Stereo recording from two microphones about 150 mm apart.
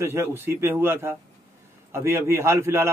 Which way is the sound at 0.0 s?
15° right (ahead or behind).